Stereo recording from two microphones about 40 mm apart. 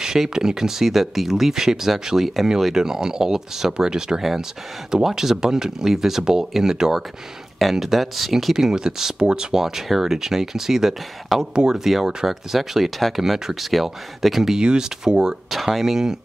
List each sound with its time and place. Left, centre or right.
0.3 s speech: centre
4.2 s speech: centre
8.5 s speech: centre
9.6 s speech: centre